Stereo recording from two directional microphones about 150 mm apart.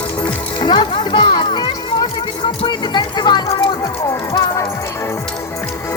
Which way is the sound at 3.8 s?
20° left (ahead or behind).